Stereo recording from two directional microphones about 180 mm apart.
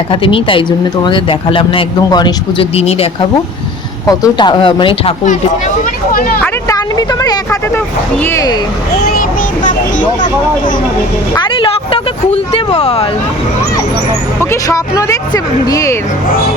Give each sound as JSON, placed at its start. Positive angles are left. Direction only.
{"t": 0.1, "sound": "speech", "side_deg": 30}
{"t": 4.0, "sound": "speech", "side_deg": 20}
{"t": 5.2, "sound": "speech", "side_deg": 40}
{"t": 6.4, "sound": "speech", "side_deg": 20}
{"t": 9.0, "sound": "a sound", "side_deg": 60}
{"t": 11.3, "sound": "speech", "side_deg": 25}
{"t": 14.5, "sound": "speech", "side_deg": 20}